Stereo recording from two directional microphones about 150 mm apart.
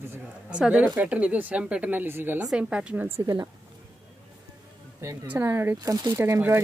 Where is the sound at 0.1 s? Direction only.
10° right (ahead or behind).